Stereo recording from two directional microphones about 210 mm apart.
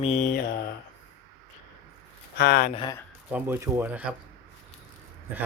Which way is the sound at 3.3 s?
10° right (ahead or behind).